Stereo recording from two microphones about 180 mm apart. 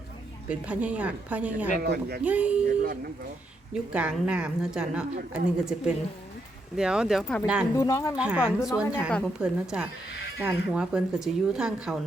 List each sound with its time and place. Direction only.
0.6 s a woman's voice: 5° right (ahead or behind)
1.8 s speech: 60° right (ahead or behind)
2.2 s a woman's voice: 10° right (ahead or behind)
3.9 s speech: 5° right (ahead or behind)
7.8 s speech: 20° left (ahead or behind)
8.1 s speech: 5° right (ahead or behind)